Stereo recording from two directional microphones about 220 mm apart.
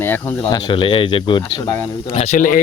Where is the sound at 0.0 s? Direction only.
10° left (ahead or behind).